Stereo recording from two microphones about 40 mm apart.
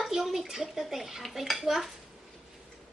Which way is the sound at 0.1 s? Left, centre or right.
Centre.